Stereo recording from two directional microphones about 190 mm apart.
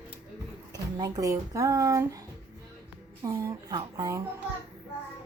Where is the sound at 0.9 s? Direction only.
15° right (ahead or behind).